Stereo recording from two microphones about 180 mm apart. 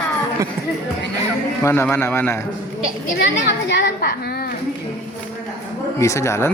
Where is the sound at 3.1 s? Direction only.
65° left (ahead or behind).